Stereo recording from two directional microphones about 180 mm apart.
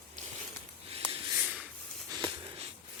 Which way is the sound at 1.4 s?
5° right (ahead or behind).